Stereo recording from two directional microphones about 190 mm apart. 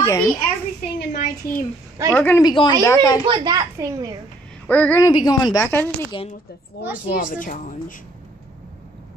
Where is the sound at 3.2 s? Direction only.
20° right (ahead or behind).